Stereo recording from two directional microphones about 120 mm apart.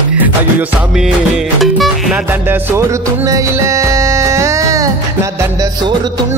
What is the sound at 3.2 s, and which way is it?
Music, 25° right (ahead or behind).